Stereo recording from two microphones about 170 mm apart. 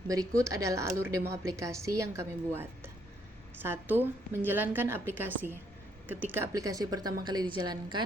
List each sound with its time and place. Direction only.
0.1 s a woman's voice: 20° right (ahead or behind)